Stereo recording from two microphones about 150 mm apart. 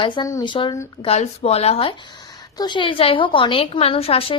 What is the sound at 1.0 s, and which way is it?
Speech, 45° left (ahead or behind).